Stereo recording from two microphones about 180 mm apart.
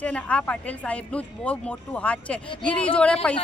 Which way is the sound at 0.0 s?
5° left (ahead or behind).